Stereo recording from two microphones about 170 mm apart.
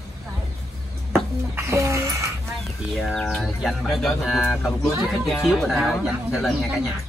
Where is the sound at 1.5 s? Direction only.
15° right (ahead or behind).